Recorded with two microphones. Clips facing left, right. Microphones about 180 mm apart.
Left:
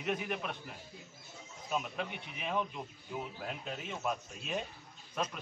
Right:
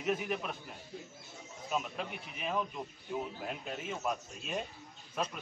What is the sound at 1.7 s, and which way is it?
A man's voice, centre (ahead or behind).